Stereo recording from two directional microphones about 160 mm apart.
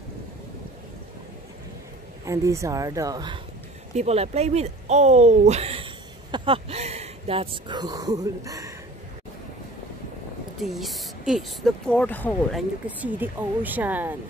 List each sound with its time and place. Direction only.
2.2 s speech: 20° right (ahead or behind)
3.9 s speech: 40° right (ahead or behind); by 8.7 s 20° right (ahead or behind)
10.6 s speech: centre (ahead or behind)
12.5 s speech: 10° right (ahead or behind)